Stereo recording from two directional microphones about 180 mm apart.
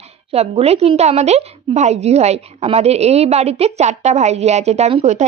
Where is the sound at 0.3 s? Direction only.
35° right (ahead or behind).